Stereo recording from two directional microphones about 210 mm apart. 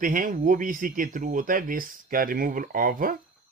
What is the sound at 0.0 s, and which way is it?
Speech, 40° right (ahead or behind).